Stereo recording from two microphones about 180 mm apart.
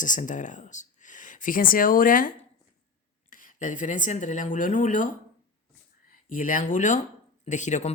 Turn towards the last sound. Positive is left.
turn(degrees=40)  # may be behind; listen again after turning